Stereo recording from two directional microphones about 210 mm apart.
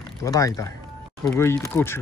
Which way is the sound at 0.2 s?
15° left (ahead or behind).